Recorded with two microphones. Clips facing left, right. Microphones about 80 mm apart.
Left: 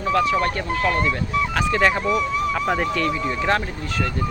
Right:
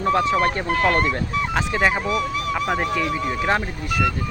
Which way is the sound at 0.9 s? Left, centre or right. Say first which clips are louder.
Right 1 dB; right.